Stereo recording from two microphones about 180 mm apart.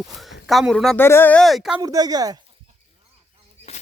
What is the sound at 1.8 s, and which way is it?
Speech, 20° right (ahead or behind).